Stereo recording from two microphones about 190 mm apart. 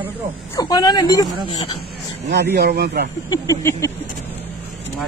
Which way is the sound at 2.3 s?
60° right (ahead or behind).